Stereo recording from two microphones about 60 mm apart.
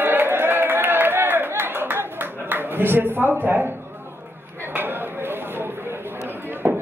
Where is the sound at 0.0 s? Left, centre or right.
Right.